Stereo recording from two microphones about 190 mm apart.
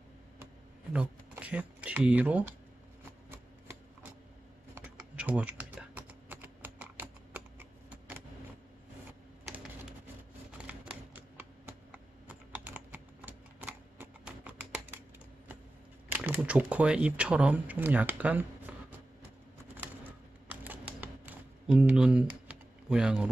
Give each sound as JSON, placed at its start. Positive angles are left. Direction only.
{"t": 0.9, "sound": "speech", "side_deg": -10}
{"t": 3.1, "sound": "a sound", "side_deg": -10}
{"t": 4.7, "sound": "typing", "side_deg": -10}
{"t": 10.7, "sound": "typing", "side_deg": -10}
{"t": 16.1, "sound": "speech", "side_deg": -10}
{"t": 20.4, "sound": "typing", "side_deg": -10}
{"t": 21.0, "sound": "computer keyboard", "side_deg": -5}